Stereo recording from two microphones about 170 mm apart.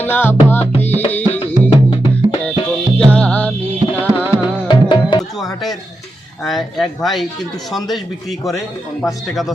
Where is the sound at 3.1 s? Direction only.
5° left (ahead or behind).